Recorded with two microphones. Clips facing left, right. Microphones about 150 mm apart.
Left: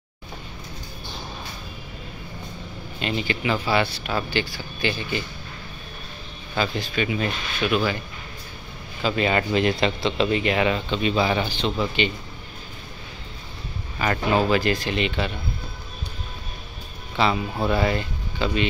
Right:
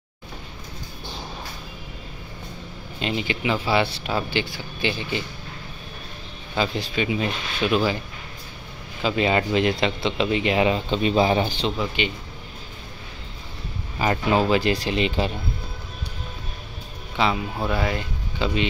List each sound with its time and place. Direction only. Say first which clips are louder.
3.0 s speech: even; 20° right (ahead or behind)
6.5 s speech: right 1 dB; 25° right (ahead or behind)
9.0 s speech: right 1 dB; 20° right (ahead or behind)
10.9 s speech: right 2 dB; 35° right (ahead or behind)
11.1 s speech: right 4 dB; 25° right (ahead or behind)
11.8 s speech: left 4 dB; 10° right (ahead or behind)
13.9 s speech: right 1 dB; 25° right (ahead or behind)
17.3 s speech: left 2 dB; centre (ahead or behind)
17.9 s speech: left 1 dB; 20° right (ahead or behind)